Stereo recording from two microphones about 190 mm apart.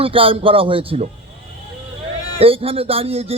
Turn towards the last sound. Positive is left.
turn(degrees=-30)  # may be behind; listen again after turning